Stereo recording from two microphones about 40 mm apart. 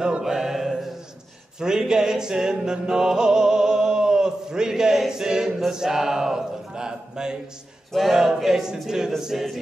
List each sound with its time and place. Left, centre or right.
0.2 s music: centre
1.6 s music: centre
5.7 s a man's voice: centre
7.9 s a sound: centre